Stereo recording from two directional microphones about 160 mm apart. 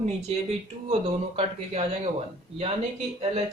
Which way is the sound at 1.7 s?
40° right (ahead or behind).